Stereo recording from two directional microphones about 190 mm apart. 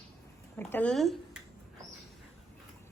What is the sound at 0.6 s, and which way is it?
Speech, 10° left (ahead or behind).